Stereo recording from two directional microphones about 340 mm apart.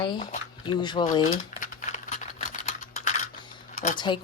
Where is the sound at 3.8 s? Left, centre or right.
Centre.